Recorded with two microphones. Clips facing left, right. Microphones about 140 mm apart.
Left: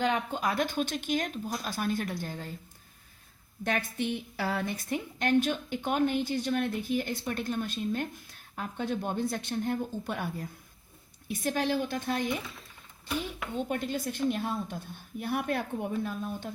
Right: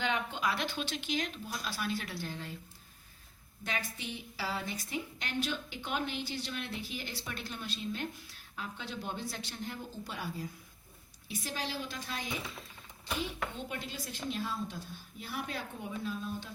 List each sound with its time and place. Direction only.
0.0 s a woman's voice: 40° left (ahead or behind)
3.6 s a woman's voice: 50° left (ahead or behind)
13.6 s a woman's voice: 50° left (ahead or behind)